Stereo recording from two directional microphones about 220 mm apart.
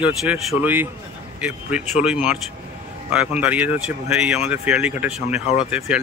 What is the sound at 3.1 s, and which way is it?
A man's voice, 5° right (ahead or behind).